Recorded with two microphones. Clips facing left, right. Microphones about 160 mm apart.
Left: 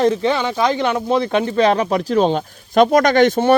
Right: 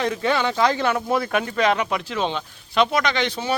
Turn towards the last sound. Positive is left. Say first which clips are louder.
# left 11 dB
turn(degrees=50)  # may be behind; listen again after turning